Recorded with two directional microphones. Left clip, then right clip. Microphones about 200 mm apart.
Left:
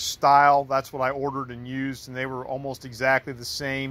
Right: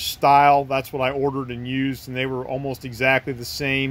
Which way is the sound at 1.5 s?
30° left (ahead or behind).